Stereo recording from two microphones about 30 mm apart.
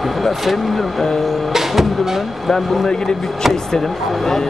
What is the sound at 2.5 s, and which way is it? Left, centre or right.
Speech, centre.